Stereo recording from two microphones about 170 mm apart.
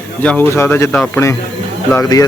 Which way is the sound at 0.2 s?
10° left (ahead or behind).